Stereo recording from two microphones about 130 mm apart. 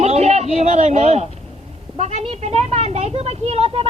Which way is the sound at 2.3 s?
55° right (ahead or behind).